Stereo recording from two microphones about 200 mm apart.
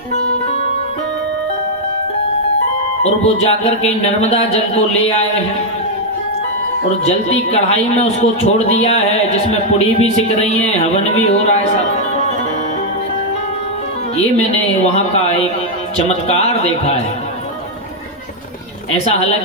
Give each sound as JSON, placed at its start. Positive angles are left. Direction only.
{"t": 3.0, "sound": "speech", "side_deg": 30}
{"t": 7.0, "sound": "speech", "side_deg": 30}
{"t": 16.0, "sound": "speech", "side_deg": 30}